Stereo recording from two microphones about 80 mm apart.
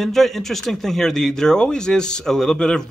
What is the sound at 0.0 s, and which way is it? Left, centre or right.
Speech, centre.